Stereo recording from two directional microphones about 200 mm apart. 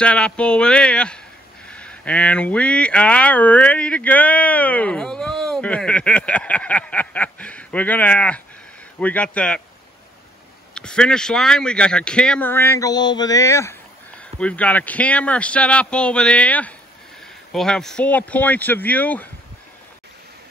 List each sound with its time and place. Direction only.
0.0 s speech: 5° left (ahead or behind)
10.7 s speech: 5° left (ahead or behind)